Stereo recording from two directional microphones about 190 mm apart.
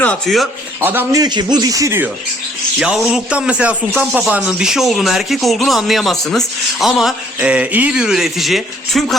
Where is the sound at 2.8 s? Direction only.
5° right (ahead or behind).